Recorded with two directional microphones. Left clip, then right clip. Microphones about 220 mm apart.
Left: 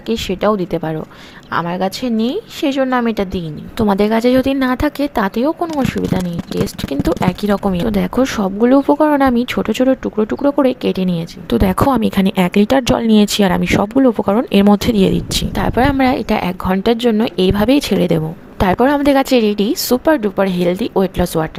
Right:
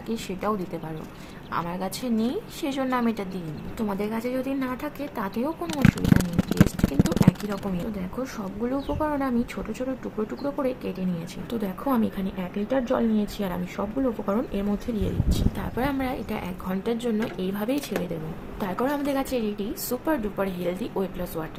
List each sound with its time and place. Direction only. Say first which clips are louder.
0.1 s a woman's voice: left 13 dB; 35° left (ahead or behind)
7.4 s a woman's voice: left 14 dB; 40° left (ahead or behind)